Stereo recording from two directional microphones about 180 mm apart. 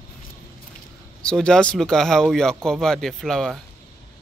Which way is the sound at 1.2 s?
5° left (ahead or behind).